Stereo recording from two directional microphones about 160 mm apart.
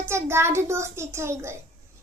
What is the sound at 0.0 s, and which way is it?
A child's voice, 15° right (ahead or behind).